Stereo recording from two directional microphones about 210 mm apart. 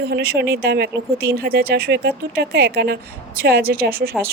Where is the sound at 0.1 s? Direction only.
50° right (ahead or behind).